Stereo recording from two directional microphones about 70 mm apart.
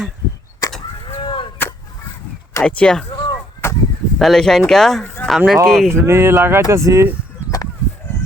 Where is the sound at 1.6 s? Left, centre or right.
Left.